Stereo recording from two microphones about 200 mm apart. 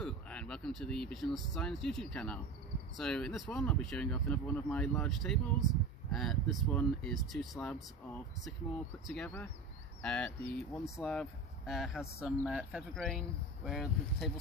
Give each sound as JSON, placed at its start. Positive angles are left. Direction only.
{"t": 0.0, "sound": "speech", "side_deg": 5}
{"t": 9.0, "sound": "speech", "side_deg": 5}